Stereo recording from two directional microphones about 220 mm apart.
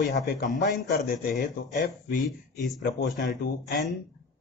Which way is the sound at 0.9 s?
40° left (ahead or behind).